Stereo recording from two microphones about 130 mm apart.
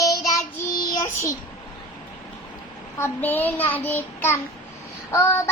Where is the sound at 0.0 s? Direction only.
25° left (ahead or behind).